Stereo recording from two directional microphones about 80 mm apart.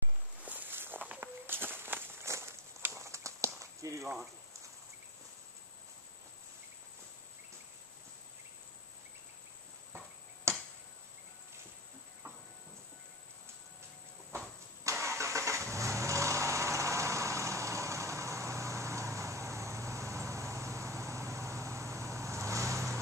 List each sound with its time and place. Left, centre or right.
0.5 s walk: right
10.5 s finger snapping: right
14.9 s vehicle: right